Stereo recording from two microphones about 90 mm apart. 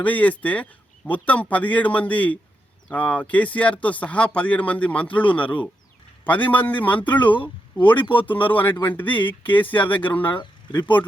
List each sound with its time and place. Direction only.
0.0 s speech: 15° left (ahead or behind)
8.0 s speech: 70° left (ahead or behind)
8.3 s speech: 20° left (ahead or behind)